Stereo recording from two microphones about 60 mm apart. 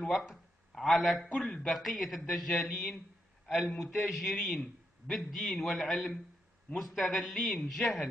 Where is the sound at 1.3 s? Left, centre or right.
Centre.